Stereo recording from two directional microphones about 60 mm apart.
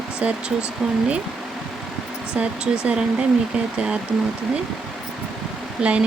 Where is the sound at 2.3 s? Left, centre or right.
Centre.